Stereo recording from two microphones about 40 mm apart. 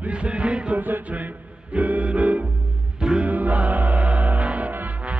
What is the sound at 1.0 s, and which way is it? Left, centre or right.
Music, right.